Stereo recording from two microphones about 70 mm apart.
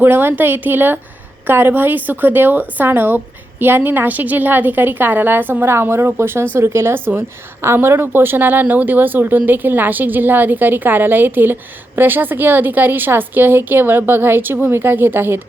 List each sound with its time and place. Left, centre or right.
0.0 s a woman's voice: right